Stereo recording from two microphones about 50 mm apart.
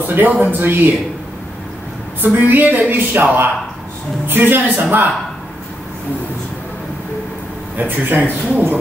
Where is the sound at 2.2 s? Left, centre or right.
Right.